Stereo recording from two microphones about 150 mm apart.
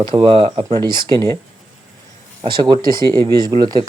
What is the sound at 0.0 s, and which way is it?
Speech, 35° right (ahead or behind).